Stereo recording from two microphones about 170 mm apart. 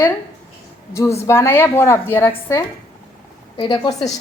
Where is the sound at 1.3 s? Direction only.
15° left (ahead or behind).